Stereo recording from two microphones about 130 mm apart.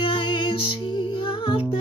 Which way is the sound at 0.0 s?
40° left (ahead or behind).